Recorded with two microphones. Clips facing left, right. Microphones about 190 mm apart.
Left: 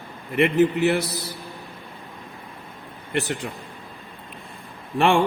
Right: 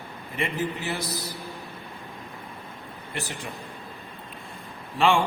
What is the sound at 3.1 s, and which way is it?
Speech, 70° left (ahead or behind).